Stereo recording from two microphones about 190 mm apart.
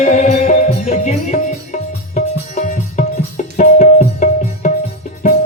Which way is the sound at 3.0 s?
40° left (ahead or behind).